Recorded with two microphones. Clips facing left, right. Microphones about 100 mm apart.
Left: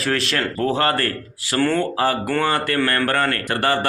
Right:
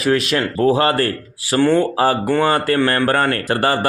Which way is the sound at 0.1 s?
15° right (ahead or behind).